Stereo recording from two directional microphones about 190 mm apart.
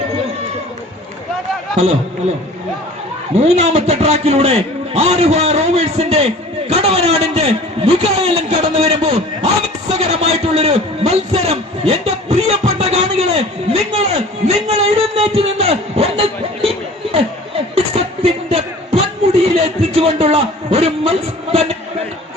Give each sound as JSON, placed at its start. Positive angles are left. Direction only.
{"t": 3.3, "sound": "a man's voice", "side_deg": -35}
{"t": 13.9, "sound": "a sound", "side_deg": -35}
{"t": 17.9, "sound": "music", "side_deg": -30}